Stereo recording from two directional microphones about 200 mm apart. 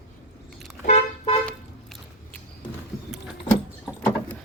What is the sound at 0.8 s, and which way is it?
Car, 35° left (ahead or behind).